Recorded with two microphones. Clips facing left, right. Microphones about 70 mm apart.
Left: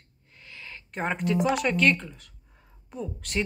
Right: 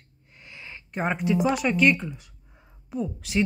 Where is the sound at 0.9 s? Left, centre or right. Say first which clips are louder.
Right 2 dB; centre.